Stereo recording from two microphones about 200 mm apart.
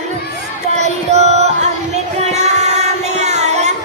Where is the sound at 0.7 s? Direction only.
35° right (ahead or behind).